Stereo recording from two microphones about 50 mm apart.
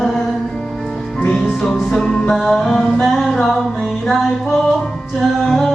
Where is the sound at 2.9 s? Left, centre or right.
Centre.